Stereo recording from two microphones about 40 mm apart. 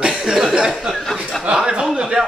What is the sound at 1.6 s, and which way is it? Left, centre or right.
Speech, centre.